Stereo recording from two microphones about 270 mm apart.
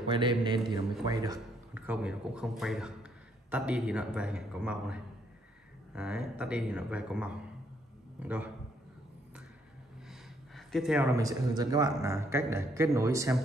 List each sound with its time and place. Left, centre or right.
0.1 s a man's voice: centre
10.0 s speech: centre